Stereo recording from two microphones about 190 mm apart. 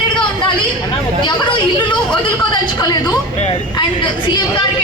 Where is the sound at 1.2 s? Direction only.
25° left (ahead or behind).